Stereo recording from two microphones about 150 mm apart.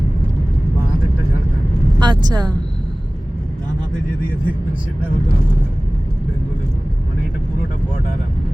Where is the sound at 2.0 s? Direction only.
30° right (ahead or behind).